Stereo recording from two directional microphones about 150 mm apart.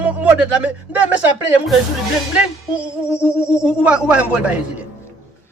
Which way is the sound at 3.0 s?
15° left (ahead or behind).